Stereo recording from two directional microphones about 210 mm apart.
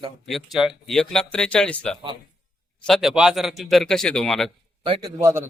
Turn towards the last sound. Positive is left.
turn(degrees=-15)  # may be behind; listen again after turning